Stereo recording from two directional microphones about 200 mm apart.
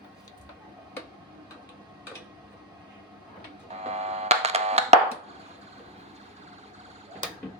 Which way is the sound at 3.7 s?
35° right (ahead or behind).